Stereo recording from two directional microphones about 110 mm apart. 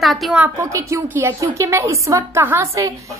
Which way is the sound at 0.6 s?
25° right (ahead or behind).